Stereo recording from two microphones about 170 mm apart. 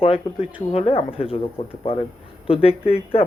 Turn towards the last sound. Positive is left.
turn(degrees=35)  # may be behind; listen again after turning